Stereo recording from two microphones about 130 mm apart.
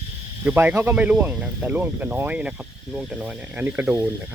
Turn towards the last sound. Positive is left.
turn(degrees=-10)  # may be behind; listen again after turning